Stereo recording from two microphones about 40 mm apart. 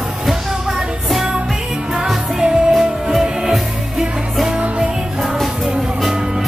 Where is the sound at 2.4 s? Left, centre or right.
Centre.